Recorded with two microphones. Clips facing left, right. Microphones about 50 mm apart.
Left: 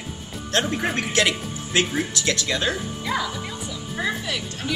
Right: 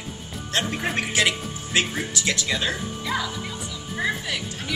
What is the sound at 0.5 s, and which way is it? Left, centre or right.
A woman's voice, centre.